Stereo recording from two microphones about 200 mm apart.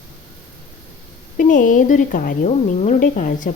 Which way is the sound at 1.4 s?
40° left (ahead or behind).